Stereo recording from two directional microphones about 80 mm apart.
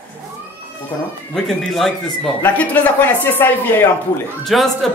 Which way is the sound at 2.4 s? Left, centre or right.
Centre.